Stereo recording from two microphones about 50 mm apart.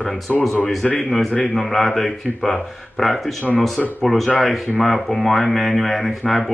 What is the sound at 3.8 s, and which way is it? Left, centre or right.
Speech, left.